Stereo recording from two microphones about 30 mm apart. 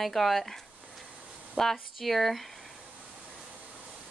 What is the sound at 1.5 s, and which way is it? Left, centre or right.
Speech, centre.